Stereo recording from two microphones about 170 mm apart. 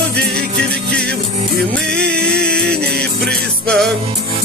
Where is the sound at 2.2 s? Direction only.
5° left (ahead or behind).